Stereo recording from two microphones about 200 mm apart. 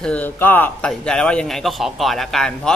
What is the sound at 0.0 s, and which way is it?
Speech, 5° left (ahead or behind).